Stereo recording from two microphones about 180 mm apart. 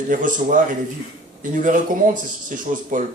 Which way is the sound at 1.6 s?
45° right (ahead or behind).